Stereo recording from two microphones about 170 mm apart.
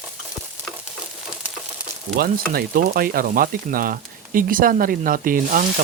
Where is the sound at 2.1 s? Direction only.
60° right (ahead or behind).